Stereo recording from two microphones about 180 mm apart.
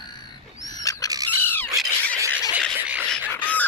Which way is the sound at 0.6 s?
20° left (ahead or behind).